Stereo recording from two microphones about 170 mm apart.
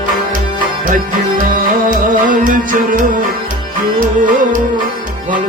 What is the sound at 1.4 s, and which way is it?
Music, 50° right (ahead or behind).